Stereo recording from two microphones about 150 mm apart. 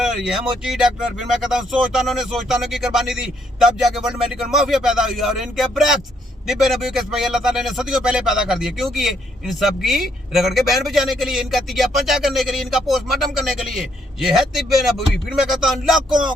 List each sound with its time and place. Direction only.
0.0 s speech: 5° right (ahead or behind)